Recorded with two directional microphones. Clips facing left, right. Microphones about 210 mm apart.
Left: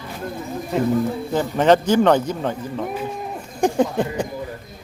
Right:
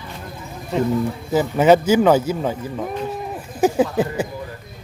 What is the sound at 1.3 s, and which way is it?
Speech, 5° right (ahead or behind).